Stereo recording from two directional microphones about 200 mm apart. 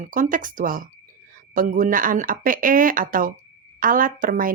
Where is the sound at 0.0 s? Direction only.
40° right (ahead or behind).